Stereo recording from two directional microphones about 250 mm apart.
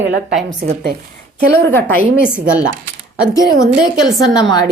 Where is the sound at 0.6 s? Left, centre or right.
Right.